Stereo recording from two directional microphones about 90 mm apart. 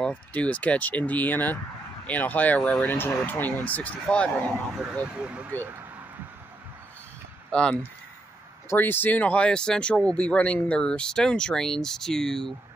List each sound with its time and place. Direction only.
0.0 s speech: 15° left (ahead or behind)
5.0 s speech: 10° right (ahead or behind)
5.5 s speech: 30° right (ahead or behind)
7.5 s speech: 10° left (ahead or behind)
8.6 s speech: 25° left (ahead or behind); by 12.5 s 5° left (ahead or behind)